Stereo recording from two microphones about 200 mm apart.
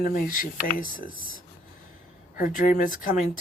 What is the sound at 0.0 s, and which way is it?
Speech, 45° left (ahead or behind).